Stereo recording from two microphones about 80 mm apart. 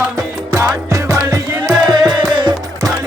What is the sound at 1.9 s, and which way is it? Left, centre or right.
Music, right.